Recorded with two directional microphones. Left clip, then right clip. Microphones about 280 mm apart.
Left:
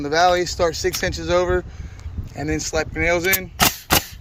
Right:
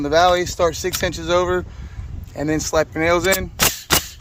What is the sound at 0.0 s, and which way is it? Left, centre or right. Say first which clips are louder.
Speech: right 2 dB; centre.